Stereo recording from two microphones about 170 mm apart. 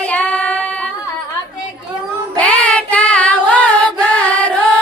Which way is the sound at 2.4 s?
5° left (ahead or behind).